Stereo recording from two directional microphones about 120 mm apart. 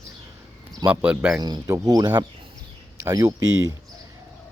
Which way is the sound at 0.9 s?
10° right (ahead or behind).